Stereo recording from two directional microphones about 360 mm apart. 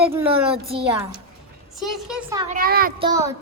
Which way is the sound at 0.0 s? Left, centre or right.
Centre.